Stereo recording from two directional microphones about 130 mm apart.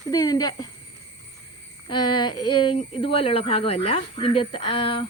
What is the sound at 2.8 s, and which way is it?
Speech, 45° left (ahead or behind).